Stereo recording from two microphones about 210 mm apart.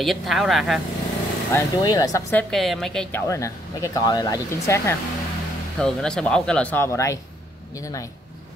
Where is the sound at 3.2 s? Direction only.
15° left (ahead or behind).